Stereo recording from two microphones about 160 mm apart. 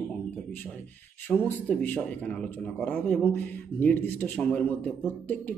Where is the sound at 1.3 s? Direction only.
10° left (ahead or behind).